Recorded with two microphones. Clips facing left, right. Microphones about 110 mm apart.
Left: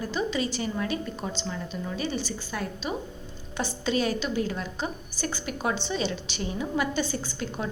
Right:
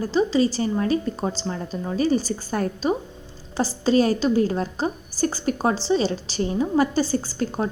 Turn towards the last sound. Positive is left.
turn(degrees=-40)  # may be behind; listen again after turning